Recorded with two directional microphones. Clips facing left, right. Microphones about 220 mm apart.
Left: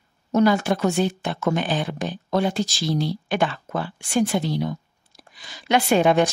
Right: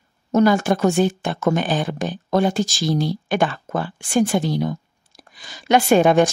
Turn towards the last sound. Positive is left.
turn(degrees=-45)  # may be behind; listen again after turning